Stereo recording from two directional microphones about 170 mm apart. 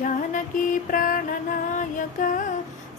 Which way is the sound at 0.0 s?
50° left (ahead or behind).